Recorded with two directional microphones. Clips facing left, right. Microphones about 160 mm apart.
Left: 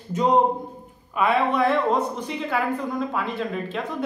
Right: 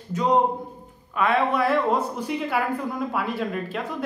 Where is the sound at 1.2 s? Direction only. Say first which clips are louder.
Left 1 dB; centre (ahead or behind).